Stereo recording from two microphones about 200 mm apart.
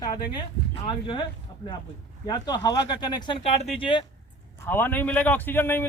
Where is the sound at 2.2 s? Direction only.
20° left (ahead or behind).